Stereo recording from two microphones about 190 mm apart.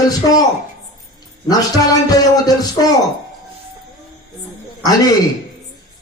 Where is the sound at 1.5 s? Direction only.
20° left (ahead or behind).